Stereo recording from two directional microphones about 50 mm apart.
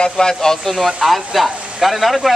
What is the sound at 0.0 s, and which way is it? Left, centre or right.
Speech, centre.